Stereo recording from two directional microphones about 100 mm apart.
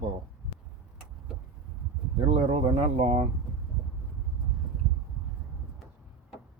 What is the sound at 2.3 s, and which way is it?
Speech, 70° right (ahead or behind).